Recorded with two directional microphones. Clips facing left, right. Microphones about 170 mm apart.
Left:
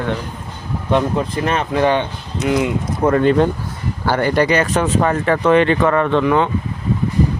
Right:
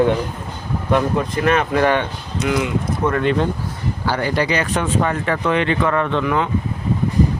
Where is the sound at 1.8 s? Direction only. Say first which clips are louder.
Left 1 dB; 15° left (ahead or behind).